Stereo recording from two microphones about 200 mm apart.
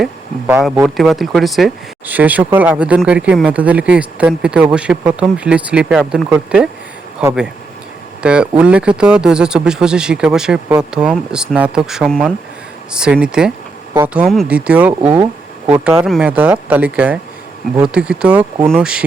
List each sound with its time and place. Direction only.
0.0 s speech: 10° right (ahead or behind)
0.6 s speech: centre (ahead or behind)